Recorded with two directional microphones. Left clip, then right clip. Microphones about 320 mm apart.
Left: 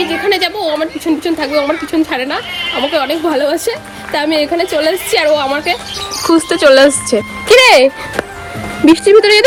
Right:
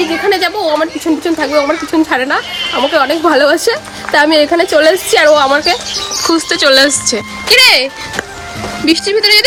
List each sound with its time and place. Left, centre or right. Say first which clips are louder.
0.3 s speech: right 2 dB; centre
6.2 s speech: left 2 dB; centre
8.9 s speech: left 3 dB; centre